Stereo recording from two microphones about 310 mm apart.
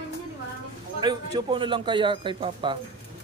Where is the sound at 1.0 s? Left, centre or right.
Centre.